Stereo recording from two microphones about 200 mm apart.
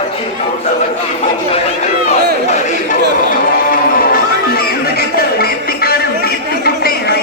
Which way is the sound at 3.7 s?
45° left (ahead or behind).